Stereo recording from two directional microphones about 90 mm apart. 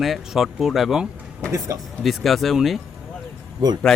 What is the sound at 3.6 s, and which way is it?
Speech, 50° right (ahead or behind).